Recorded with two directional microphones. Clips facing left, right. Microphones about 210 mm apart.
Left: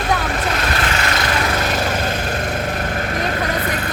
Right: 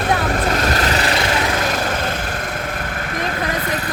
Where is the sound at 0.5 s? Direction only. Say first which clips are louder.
Right 3 dB; 40° right (ahead or behind).